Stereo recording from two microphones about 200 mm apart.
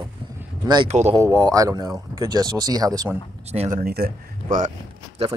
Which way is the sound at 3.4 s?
35° right (ahead or behind).